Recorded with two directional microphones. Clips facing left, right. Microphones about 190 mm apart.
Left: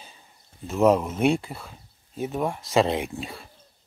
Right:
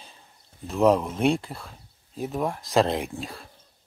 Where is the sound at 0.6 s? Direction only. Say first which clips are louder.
Left 1 dB; centre (ahead or behind).